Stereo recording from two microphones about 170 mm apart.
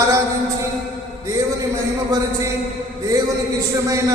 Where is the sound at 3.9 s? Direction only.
20° right (ahead or behind).